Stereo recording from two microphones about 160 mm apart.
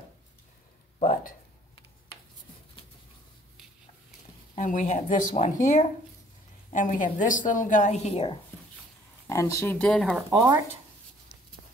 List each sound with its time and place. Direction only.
1.0 s a sound: 60° left (ahead or behind)
4.6 s a woman's voice: 50° left (ahead or behind)
9.3 s speech: 20° left (ahead or behind)
10.3 s speech: 20° right (ahead or behind)